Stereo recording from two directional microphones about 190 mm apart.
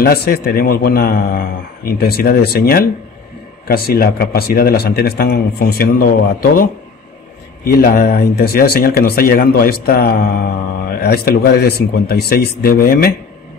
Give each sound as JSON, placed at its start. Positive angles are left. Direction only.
{"t": 0.0, "sound": "speech", "side_deg": 55}